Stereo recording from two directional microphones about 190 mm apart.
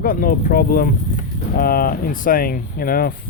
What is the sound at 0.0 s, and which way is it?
Speech, 45° left (ahead or behind).